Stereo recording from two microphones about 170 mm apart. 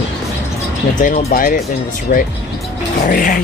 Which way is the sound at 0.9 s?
55° left (ahead or behind).